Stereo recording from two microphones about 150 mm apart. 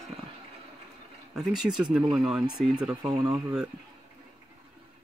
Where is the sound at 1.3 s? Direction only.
Centre (ahead or behind).